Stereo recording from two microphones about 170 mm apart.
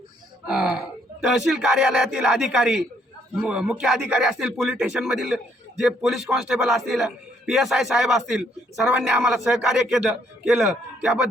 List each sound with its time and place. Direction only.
0.4 s a man's voice: 5° right (ahead or behind)